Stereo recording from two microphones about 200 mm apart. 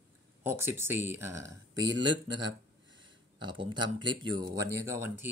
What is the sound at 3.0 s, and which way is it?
A man's voice, 25° right (ahead or behind).